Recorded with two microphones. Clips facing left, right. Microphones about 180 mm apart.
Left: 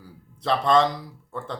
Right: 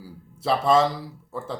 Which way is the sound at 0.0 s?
5° right (ahead or behind).